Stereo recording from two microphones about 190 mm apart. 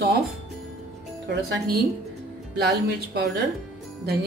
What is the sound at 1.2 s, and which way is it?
A woman's voice, 60° right (ahead or behind).